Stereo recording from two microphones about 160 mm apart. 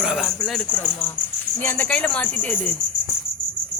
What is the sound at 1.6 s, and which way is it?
Speech, 10° left (ahead or behind).